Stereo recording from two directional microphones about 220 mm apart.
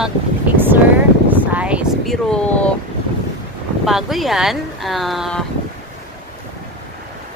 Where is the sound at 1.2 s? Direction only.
5° right (ahead or behind).